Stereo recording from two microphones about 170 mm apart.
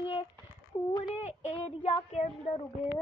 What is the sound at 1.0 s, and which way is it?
Speech, 45° left (ahead or behind).